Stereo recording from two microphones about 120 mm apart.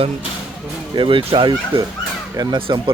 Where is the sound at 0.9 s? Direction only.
45° right (ahead or behind).